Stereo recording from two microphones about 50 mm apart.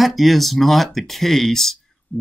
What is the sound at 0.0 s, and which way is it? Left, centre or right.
Speech, centre.